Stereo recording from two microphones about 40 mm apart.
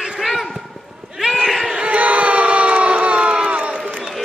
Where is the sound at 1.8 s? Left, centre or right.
Right.